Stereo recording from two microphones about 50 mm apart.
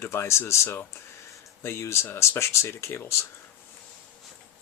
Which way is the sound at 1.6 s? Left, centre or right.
Left.